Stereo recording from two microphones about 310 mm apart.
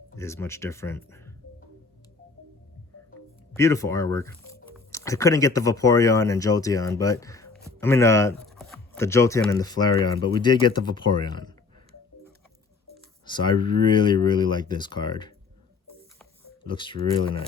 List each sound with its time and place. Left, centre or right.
0.2 s speech: centre
3.5 s speech: centre
13.2 s speech: centre
16.6 s speech: centre